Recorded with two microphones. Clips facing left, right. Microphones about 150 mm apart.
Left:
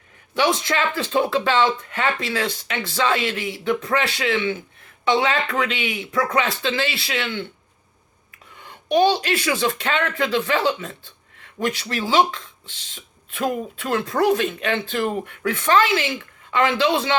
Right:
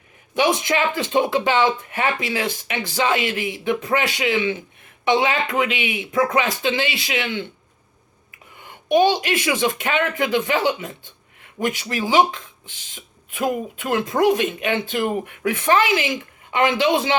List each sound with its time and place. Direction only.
0.3 s speech: 15° right (ahead or behind)
8.6 s speech: 10° right (ahead or behind)